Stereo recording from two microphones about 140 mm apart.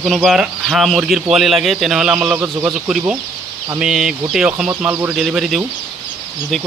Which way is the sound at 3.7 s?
5° right (ahead or behind).